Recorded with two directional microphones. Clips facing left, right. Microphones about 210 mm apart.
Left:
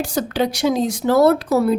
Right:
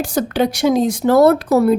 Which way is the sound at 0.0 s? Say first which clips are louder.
Right 3 dB; 50° right (ahead or behind).